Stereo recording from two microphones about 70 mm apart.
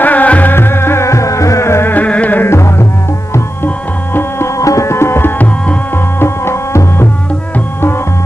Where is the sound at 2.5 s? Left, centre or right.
Left.